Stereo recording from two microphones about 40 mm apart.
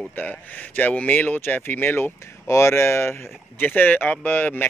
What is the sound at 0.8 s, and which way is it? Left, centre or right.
Speech, left.